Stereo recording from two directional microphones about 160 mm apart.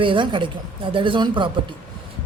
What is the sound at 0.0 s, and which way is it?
A woman's voice, 30° right (ahead or behind).